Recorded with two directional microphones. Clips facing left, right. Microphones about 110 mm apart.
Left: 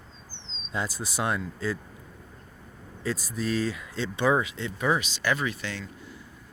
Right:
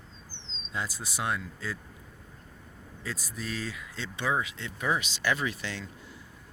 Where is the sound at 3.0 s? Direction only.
35° left (ahead or behind).